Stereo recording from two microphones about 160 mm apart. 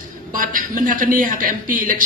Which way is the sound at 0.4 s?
60° right (ahead or behind).